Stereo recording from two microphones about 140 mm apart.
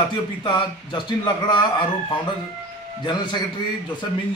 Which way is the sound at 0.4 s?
35° left (ahead or behind).